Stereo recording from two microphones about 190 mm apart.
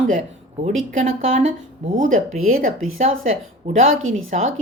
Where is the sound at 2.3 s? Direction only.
90° right.